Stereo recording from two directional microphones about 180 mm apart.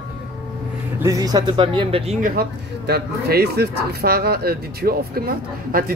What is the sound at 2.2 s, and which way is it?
Speech, 55° right (ahead or behind).